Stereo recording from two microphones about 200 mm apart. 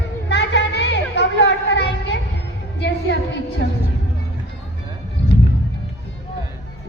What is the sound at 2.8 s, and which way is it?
Music, 55° left (ahead or behind).